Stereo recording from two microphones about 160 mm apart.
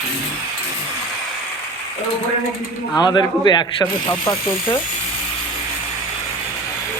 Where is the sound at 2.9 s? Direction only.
25° left (ahead or behind).